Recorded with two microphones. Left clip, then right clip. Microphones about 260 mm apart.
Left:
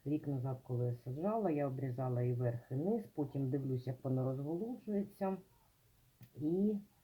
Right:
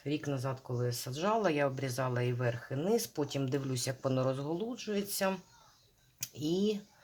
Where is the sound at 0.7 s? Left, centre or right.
Right.